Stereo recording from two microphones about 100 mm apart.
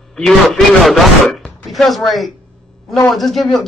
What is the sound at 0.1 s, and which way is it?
A man's voice, 5° left (ahead or behind).